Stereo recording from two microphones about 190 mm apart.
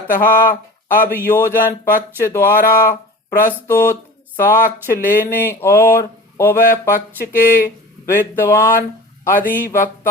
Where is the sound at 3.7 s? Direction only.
15° left (ahead or behind).